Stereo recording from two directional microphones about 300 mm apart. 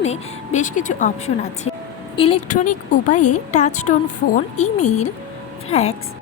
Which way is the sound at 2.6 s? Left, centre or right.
Left.